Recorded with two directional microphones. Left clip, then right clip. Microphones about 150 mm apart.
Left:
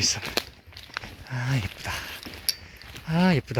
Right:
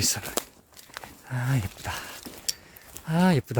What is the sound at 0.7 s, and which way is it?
Walk, 10° left (ahead or behind).